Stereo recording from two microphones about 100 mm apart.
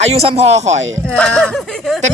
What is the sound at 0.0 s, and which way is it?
Speech, 85° right.